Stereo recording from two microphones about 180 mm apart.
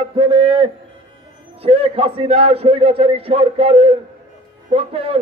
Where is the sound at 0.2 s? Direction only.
30° right (ahead or behind).